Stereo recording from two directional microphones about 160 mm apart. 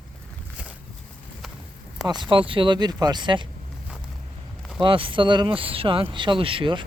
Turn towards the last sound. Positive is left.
turn(degrees=-35)  # may be behind; listen again after turning